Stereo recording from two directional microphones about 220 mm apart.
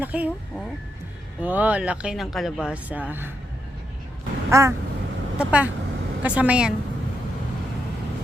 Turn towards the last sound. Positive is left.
turn(degrees=-5)  # may be behind; listen again after turning